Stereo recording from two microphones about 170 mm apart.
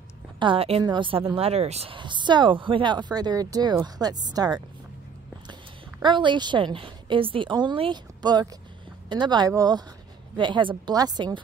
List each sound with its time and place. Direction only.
0.4 s a woman's voice: 30° right (ahead or behind)